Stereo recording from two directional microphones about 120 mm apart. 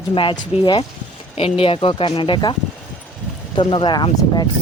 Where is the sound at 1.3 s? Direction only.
55° left (ahead or behind).